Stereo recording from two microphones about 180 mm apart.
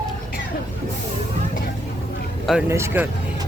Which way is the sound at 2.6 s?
15° right (ahead or behind).